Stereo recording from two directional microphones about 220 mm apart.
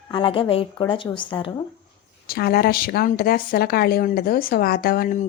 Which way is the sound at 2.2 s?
45° left (ahead or behind).